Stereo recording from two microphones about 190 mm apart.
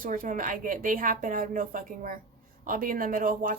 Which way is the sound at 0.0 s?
45° right (ahead or behind).